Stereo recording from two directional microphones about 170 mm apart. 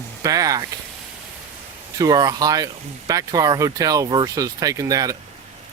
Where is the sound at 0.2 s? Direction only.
20° right (ahead or behind).